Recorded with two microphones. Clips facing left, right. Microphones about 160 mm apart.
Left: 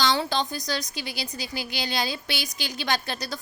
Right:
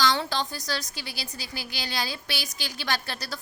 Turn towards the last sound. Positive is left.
turn(degrees=20)  # may be behind; listen again after turning